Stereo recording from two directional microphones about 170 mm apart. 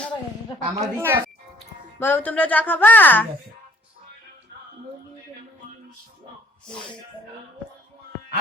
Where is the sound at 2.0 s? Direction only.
10° left (ahead or behind).